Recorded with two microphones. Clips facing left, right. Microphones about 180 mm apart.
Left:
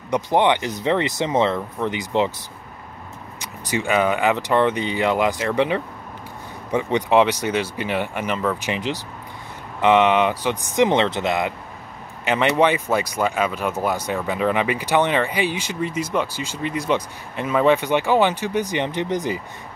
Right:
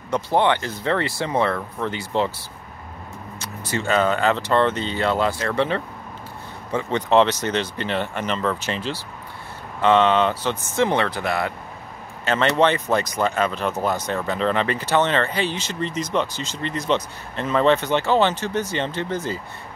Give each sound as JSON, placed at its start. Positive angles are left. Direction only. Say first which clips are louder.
{"t": 0.1, "sound": "speech", "louder": "left 1 dB", "side_deg": 15}
{"t": 3.3, "sound": "speech", "louder": "left 2 dB", "side_deg": 15}